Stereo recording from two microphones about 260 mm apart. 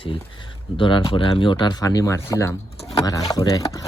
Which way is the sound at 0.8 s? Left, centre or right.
Centre.